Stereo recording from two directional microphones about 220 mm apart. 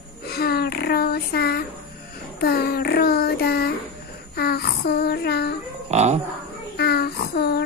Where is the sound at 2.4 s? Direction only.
45° left (ahead or behind).